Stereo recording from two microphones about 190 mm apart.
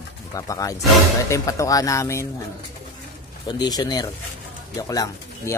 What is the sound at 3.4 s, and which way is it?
Speech, 20° left (ahead or behind).